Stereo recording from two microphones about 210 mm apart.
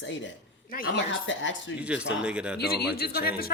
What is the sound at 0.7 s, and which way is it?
Speech, 45° left (ahead or behind).